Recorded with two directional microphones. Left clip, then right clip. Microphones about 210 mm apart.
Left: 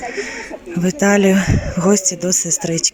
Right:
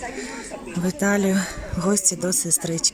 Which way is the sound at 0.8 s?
5° left (ahead or behind).